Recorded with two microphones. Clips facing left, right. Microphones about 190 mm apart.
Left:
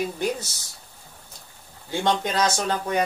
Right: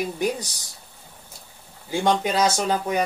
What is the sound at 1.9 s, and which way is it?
Speech, 10° right (ahead or behind).